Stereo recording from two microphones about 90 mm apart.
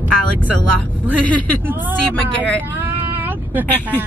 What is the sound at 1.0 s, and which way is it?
Speech, 15° left (ahead or behind).